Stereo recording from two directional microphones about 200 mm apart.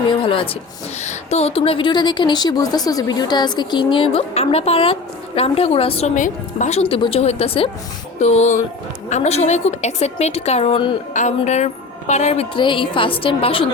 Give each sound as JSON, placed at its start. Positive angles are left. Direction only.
{"t": 0.2, "sound": "a woman's voice", "side_deg": 25}
{"t": 6.1, "sound": "a woman's voice", "side_deg": 40}